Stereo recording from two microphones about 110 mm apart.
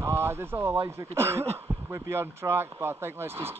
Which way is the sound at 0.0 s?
25° right (ahead or behind).